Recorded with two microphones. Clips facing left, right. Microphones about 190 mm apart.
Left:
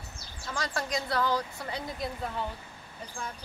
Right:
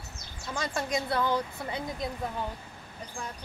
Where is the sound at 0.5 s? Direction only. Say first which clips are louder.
Right 2 dB; 20° right (ahead or behind).